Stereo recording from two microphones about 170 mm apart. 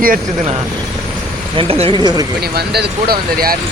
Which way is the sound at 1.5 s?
35° right (ahead or behind).